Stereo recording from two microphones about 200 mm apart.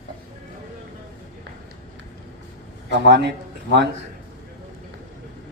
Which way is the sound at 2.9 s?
60° right (ahead or behind).